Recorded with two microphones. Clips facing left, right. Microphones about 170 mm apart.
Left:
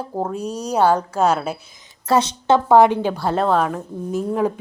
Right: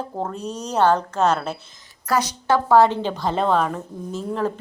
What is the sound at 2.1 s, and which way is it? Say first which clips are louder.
A woman's voice: left 4 dB; 25° left (ahead or behind).